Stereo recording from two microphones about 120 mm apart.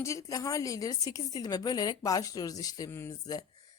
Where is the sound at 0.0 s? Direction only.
25° left (ahead or behind).